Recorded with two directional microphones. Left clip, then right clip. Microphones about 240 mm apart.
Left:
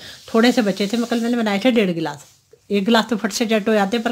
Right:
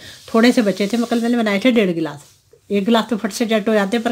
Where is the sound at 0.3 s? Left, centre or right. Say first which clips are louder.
Right 2 dB; centre.